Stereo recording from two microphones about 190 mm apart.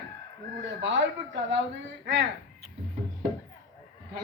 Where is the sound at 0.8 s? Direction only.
70° right (ahead or behind).